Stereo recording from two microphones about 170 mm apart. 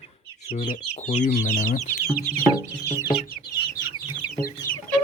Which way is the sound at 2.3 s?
5° left (ahead or behind).